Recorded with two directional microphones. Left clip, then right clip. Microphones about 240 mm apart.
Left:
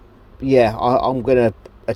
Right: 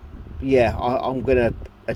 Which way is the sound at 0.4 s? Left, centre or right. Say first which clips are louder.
Left 4 dB; left.